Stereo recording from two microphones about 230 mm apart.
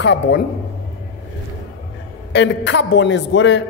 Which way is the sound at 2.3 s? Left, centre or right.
Left.